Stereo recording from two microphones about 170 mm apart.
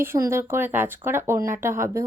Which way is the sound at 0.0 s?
15° right (ahead or behind).